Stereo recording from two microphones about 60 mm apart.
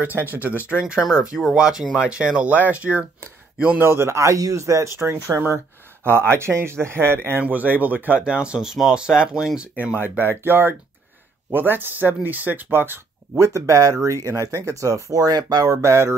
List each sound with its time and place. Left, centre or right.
0.3 s speech: right
3.6 s speech: right
7.4 s speech: right
8.2 s speech: centre
9.6 s speech: right
13.5 s speech: right